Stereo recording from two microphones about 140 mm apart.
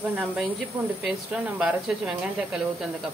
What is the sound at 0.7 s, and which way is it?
Speech, 40° right (ahead or behind).